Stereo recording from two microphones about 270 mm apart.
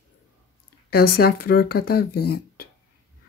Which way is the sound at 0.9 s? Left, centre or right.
Left.